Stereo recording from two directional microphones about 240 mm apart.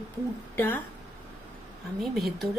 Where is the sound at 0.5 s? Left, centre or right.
Centre.